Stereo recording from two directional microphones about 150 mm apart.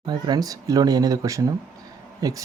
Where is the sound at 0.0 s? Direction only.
30° right (ahead or behind).